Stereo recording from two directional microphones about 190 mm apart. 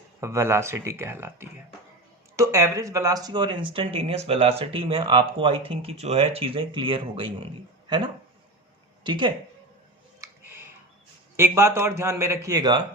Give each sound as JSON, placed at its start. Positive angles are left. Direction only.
{"t": 0.2, "sound": "a man's voice", "side_deg": -15}
{"t": 9.0, "sound": "speech", "side_deg": -25}
{"t": 10.2, "sound": "music", "side_deg": -10}
{"t": 11.3, "sound": "a man's voice", "side_deg": -15}